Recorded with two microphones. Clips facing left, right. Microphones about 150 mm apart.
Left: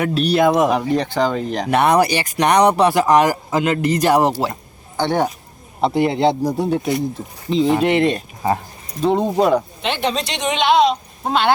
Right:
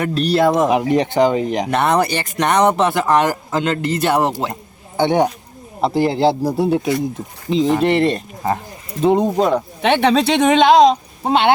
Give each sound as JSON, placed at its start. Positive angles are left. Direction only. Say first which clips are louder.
{"t": 0.0, "sound": "speech", "louder": "even", "side_deg": 0}
{"t": 0.9, "sound": "speech", "louder": "right 4 dB", "side_deg": -20}
{"t": 1.7, "sound": "speech", "louder": "left 3 dB", "side_deg": 15}
{"t": 4.9, "sound": "speech", "louder": "right 3 dB", "side_deg": -20}
{"t": 5.8, "sound": "speech", "louder": "right 1 dB", "side_deg": 0}
{"t": 9.0, "sound": "speech", "louder": "right 3 dB", "side_deg": -10}
{"t": 9.3, "sound": "speech", "louder": "left 1 dB", "side_deg": 10}
{"t": 9.9, "sound": "speech", "louder": "right 8 dB", "side_deg": -65}
{"t": 10.7, "sound": "speech", "louder": "right 2 dB", "side_deg": -40}
{"t": 11.2, "sound": "speech", "louder": "right 2 dB", "side_deg": -25}